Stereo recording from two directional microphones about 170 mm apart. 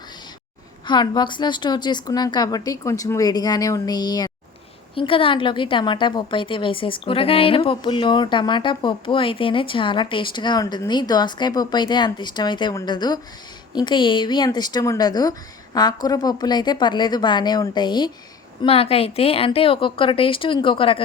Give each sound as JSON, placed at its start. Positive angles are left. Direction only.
{"t": 0.9, "sound": "a woman's voice", "side_deg": 25}